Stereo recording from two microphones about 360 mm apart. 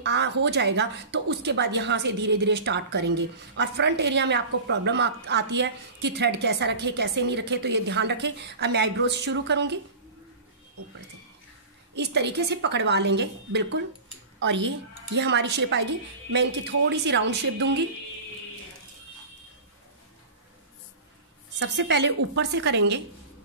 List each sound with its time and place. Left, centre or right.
0.0 s a woman's voice: right
11.9 s a woman's voice: right
21.5 s a woman's voice: right